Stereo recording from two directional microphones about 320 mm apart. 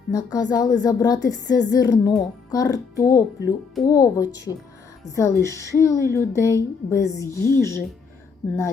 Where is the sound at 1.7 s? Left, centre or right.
Centre.